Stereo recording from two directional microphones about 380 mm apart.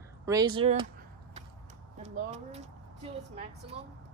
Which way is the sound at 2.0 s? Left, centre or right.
Centre.